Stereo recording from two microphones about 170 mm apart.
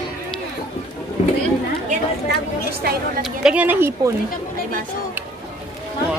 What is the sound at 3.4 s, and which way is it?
Speech, 10° right (ahead or behind).